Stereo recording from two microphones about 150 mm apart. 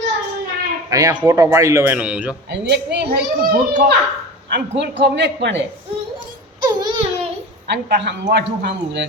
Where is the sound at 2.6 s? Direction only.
90° right.